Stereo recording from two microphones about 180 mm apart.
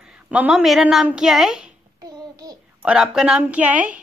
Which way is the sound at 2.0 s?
20° right (ahead or behind).